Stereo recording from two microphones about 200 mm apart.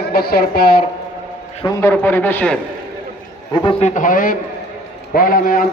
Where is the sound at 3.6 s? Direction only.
35° left (ahead or behind).